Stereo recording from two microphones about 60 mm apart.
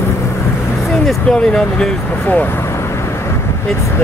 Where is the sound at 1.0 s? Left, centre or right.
Centre.